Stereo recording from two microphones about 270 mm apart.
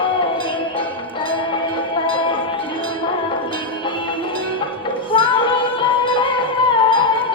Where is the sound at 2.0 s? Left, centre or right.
Centre.